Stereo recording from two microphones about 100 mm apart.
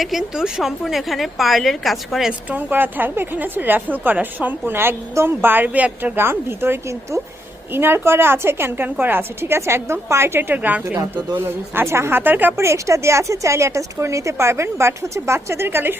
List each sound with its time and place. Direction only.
0.0 s a woman's voice: 5° right (ahead or behind)
2.5 s a woman's voice: 20° right (ahead or behind)